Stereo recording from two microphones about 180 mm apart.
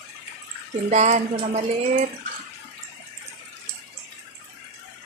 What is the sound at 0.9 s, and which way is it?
Speech, 40° right (ahead or behind).